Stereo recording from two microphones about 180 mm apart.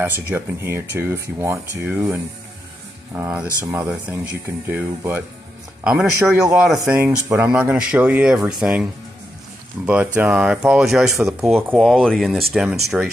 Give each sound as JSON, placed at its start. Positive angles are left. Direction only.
{"t": 0.0, "sound": "speech", "side_deg": -10}
{"t": 3.3, "sound": "speech", "side_deg": -10}
{"t": 9.8, "sound": "speech", "side_deg": -10}